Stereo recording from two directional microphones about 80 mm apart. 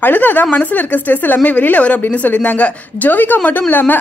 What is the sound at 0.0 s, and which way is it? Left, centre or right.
A woman's voice, left.